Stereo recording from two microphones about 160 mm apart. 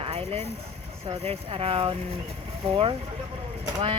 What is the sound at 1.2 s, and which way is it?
Speech, 40° right (ahead or behind).